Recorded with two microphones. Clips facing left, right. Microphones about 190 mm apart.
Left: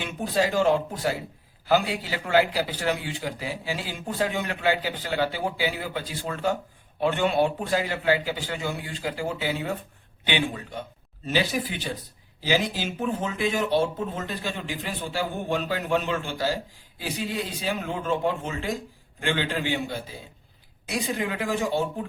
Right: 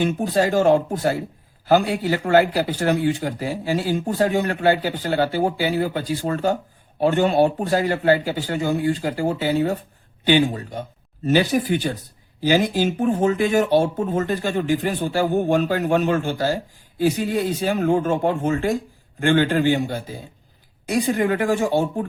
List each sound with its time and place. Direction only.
0.0 s a man's voice: 45° right (ahead or behind)